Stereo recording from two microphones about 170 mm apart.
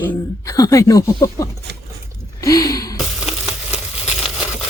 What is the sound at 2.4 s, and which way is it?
Gasp, 20° left (ahead or behind).